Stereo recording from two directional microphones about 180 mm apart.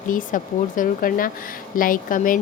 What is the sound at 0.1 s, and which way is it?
A woman's voice, 50° left (ahead or behind).